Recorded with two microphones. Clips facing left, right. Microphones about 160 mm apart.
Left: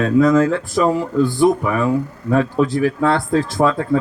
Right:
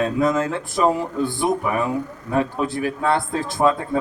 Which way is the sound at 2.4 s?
20° right (ahead or behind).